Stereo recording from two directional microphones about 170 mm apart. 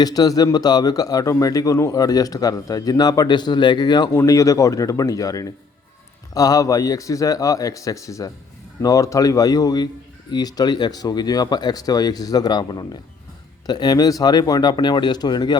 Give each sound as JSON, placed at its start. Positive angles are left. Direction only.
{"t": 0.0, "sound": "speech", "side_deg": 20}